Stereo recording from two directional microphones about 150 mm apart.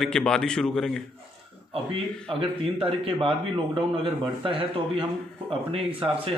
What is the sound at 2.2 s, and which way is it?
A man's voice, 35° right (ahead or behind).